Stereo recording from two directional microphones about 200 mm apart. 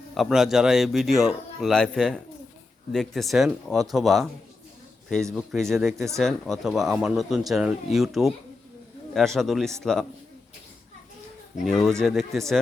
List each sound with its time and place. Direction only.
0.1 s speech: centre (ahead or behind)
5.3 s speech: centre (ahead or behind)
11.6 s speech: centre (ahead or behind)